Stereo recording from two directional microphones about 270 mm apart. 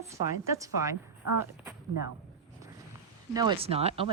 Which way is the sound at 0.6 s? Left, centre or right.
Centre.